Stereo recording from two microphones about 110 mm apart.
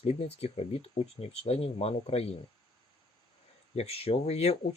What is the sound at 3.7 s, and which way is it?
Speech, 65° left (ahead or behind).